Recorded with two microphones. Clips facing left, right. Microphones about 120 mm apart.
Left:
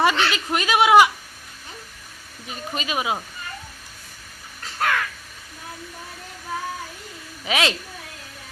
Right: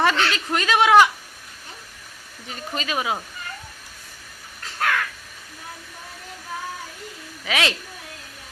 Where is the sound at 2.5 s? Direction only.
15° left (ahead or behind).